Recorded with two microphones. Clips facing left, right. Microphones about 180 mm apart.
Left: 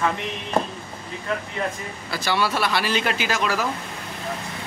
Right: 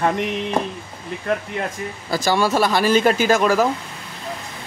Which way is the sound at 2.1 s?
40° right (ahead or behind).